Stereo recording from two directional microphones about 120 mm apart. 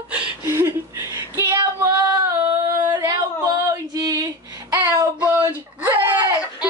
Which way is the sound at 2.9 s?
35° right (ahead or behind).